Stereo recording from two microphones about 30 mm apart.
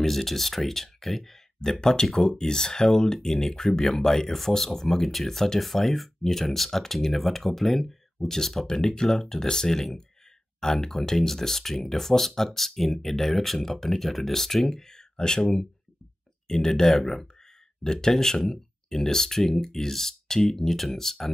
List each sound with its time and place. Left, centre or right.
0.1 s speech: centre
1.8 s speech: left
3.8 s speech: centre
8.6 s speech: left